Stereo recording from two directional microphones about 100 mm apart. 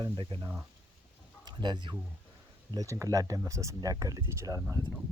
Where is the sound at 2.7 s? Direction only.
35° right (ahead or behind).